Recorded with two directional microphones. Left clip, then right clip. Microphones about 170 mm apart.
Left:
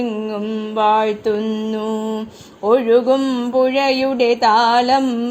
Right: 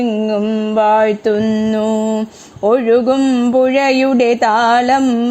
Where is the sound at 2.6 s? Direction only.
45° right (ahead or behind).